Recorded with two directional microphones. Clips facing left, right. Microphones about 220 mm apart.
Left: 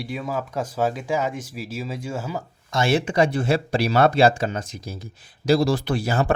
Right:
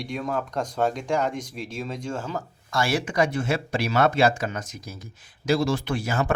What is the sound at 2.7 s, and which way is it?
Speech, 20° left (ahead or behind).